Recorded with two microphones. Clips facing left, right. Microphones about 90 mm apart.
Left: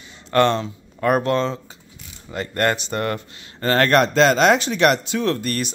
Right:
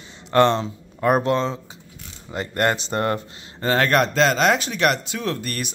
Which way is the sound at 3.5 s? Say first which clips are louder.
Left 2 dB; 10° right (ahead or behind).